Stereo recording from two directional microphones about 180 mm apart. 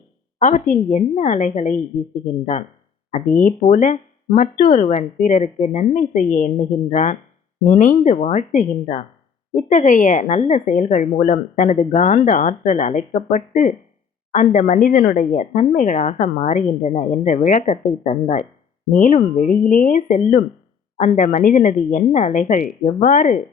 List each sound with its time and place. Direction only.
0.3 s a woman's voice: 45° left (ahead or behind)